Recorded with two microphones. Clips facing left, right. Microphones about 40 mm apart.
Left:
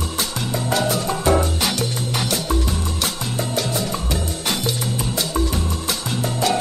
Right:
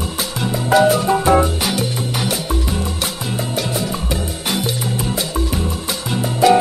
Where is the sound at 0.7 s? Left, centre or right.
Centre.